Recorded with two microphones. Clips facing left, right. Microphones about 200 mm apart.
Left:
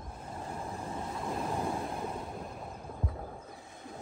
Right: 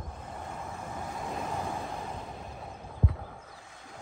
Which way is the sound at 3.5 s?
20° left (ahead or behind).